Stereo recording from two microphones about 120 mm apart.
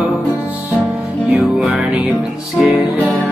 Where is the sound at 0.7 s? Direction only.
Centre (ahead or behind).